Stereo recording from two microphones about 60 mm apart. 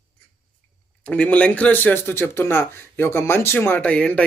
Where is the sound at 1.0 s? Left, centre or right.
Left.